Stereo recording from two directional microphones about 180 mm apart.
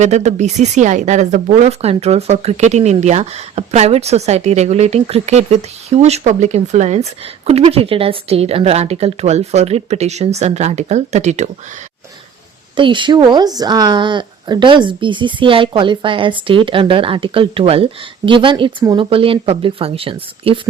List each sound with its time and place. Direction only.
0.0 s speech: 40° right (ahead or behind)
12.7 s speech: 25° right (ahead or behind)